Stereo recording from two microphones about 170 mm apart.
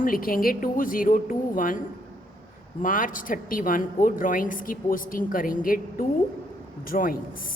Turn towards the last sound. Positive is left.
turn(degrees=55)  # may be behind; listen again after turning